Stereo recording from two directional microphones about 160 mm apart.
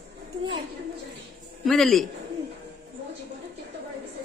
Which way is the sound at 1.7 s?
Centre (ahead or behind).